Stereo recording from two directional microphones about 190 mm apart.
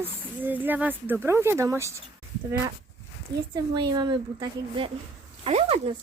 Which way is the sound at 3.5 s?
20° right (ahead or behind).